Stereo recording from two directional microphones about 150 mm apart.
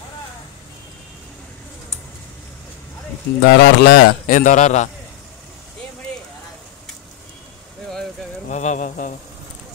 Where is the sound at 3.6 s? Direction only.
90° left; by 4.8 s 50° left (ahead or behind).